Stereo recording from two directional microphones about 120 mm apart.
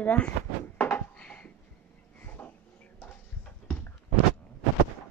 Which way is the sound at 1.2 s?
10° left (ahead or behind).